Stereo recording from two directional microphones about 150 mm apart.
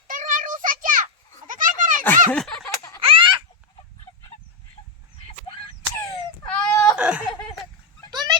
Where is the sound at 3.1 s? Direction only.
35° right (ahead or behind).